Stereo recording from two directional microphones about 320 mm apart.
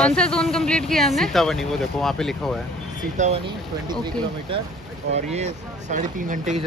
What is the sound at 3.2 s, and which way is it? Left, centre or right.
Speech, right.